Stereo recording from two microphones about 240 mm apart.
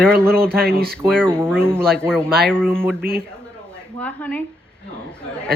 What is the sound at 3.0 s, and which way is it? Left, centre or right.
Speech, right.